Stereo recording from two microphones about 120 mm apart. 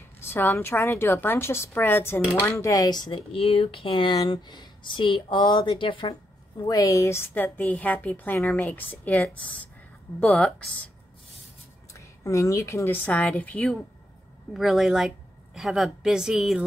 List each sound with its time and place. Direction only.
0.2 s a woman's voice: 20° left (ahead or behind); by 3.2 s 35° left (ahead or behind)
3.3 s speech: 50° left (ahead or behind)
6.7 s a woman's voice: 30° left (ahead or behind); by 10.7 s 5° left (ahead or behind)
11.9 s a woman's voice: 25° left (ahead or behind); by 13.7 s 10° left (ahead or behind)
14.5 s a woman's voice: centre (ahead or behind)